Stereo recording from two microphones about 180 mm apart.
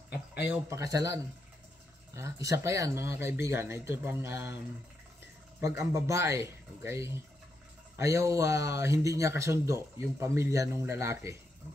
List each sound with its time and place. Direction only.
0.1 s a sound: 60° left (ahead or behind)
0.5 s speech: 15° right (ahead or behind)
5.8 s speech: 15° right (ahead or behind)